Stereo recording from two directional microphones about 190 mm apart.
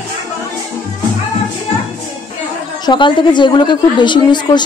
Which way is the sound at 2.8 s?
25° left (ahead or behind).